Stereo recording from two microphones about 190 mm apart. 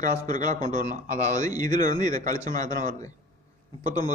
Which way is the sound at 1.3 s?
20° left (ahead or behind).